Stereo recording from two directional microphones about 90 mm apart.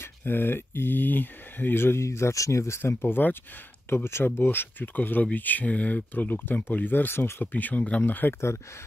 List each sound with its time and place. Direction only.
0.0 s speech: 25° left (ahead or behind)